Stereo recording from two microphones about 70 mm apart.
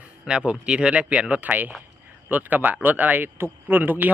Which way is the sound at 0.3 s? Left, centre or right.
Centre.